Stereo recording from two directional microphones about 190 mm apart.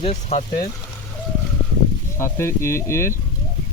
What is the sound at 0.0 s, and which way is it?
Speech, 35° left (ahead or behind).